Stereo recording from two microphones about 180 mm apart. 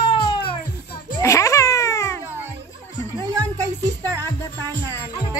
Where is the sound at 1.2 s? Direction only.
15° left (ahead or behind).